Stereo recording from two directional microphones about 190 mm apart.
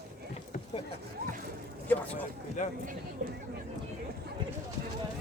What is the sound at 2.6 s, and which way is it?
Speech, 40° left (ahead or behind).